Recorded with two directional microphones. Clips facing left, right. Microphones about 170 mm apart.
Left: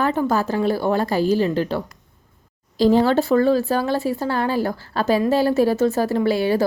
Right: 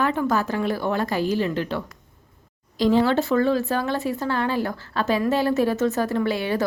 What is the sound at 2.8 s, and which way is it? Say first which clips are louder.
A woman's voice: left 3 dB; 40° left (ahead or behind).